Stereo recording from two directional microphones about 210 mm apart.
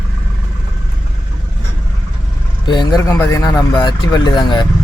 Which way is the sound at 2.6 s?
20° left (ahead or behind).